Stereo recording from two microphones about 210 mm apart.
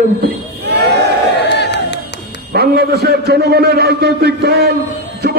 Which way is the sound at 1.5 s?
55° left (ahead or behind).